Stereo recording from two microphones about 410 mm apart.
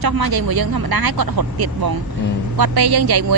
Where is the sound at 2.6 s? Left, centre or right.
Right.